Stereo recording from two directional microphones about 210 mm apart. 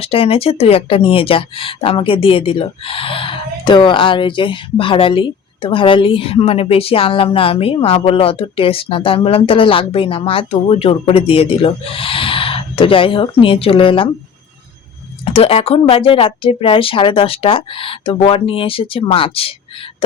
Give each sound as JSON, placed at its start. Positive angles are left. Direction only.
{"t": 0.0, "sound": "speech", "side_deg": 25}
{"t": 15.2, "sound": "speech", "side_deg": 25}